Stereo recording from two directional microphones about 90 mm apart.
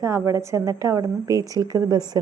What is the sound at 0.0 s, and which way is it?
A woman's voice, 30° right (ahead or behind).